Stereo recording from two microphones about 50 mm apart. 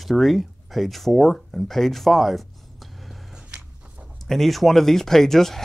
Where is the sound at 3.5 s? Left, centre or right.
Centre.